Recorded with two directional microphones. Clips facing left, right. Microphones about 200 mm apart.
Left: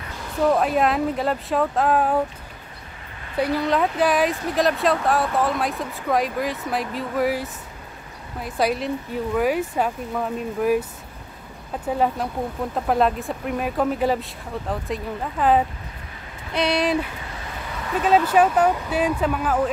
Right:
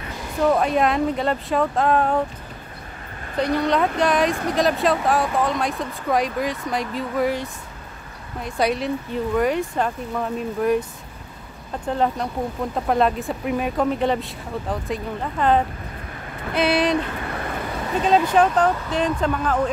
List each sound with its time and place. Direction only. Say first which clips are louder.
0.4 s speech: even; centre (ahead or behind)
3.3 s speech: right 1 dB; 5° left (ahead or behind)
17.1 s vehicle: right 7 dB; 60° right (ahead or behind)
18.0 s speech: even; 5° left (ahead or behind)